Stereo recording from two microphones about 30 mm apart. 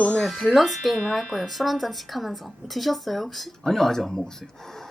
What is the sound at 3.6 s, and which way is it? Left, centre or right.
Speech, centre.